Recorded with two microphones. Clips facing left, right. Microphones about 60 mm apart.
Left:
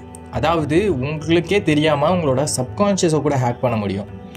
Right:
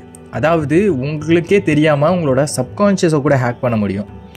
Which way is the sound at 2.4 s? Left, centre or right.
Right.